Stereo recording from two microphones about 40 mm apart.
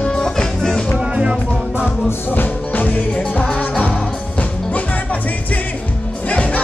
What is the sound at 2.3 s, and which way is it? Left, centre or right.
Music, left.